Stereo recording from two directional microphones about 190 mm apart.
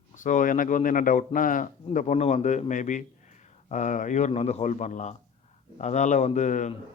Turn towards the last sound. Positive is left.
turn(degrees=40)  # may be behind; listen again after turning